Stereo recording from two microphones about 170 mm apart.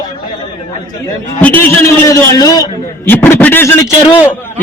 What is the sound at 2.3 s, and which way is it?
A man's voice, 20° left (ahead or behind).